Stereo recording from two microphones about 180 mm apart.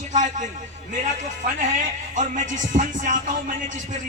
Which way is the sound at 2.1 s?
45° right (ahead or behind).